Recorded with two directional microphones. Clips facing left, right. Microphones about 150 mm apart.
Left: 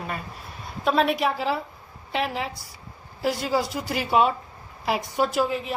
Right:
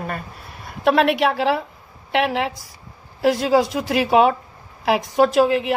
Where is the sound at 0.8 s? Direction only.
75° right (ahead or behind).